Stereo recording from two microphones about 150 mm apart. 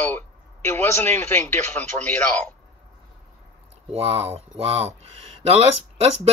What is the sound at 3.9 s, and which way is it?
Speech, 40° right (ahead or behind).